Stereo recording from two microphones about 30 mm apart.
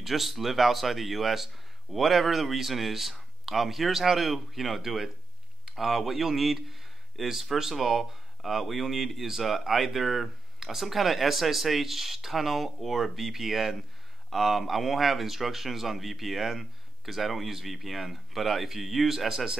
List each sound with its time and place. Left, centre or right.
0.0 s speech: centre
19.0 s speech: centre